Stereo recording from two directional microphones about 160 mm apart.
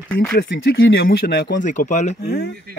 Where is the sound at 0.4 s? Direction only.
75° left (ahead or behind).